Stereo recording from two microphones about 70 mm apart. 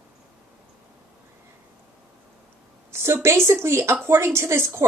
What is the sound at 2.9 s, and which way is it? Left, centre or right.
A woman's voice, right.